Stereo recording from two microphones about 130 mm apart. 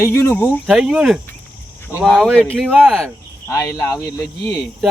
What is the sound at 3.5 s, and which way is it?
Speech, 25° left (ahead or behind).